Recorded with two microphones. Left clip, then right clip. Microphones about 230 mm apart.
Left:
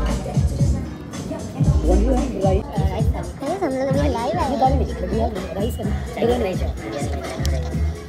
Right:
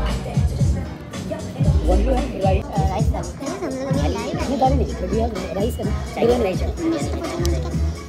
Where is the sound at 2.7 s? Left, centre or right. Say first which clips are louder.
Right 3 dB; centre.